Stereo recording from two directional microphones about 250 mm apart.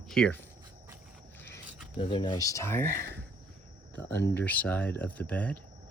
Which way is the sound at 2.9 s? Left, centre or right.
Right.